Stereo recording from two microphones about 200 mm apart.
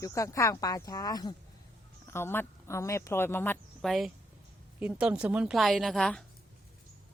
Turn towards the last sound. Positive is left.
turn(degrees=5)  # may be behind; listen again after turning